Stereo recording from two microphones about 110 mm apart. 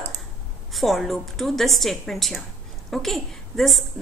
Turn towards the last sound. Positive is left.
turn(degrees=0)  # may be behind; listen again after turning